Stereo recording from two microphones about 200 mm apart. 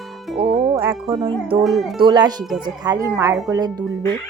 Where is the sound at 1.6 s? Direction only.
Centre (ahead or behind).